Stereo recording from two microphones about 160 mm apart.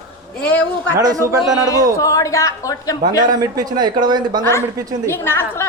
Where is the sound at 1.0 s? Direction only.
20° right (ahead or behind).